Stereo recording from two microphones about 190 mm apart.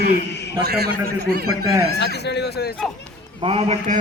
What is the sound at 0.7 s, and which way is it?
Speech, 55° right (ahead or behind).